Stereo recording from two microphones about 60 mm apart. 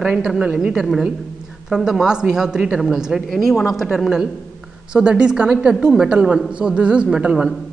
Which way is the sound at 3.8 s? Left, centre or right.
Centre.